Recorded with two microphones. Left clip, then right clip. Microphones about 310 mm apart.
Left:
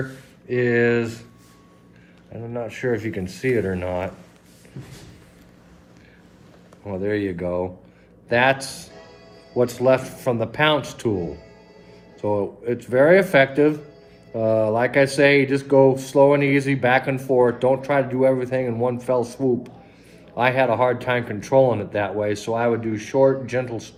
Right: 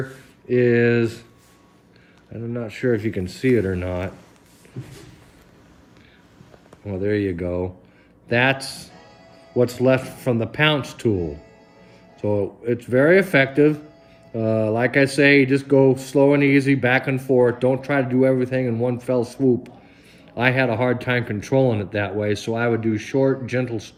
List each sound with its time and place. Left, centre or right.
0.5 s speech: centre
2.3 s speech: right
6.8 s speech: right
12.2 s speech: right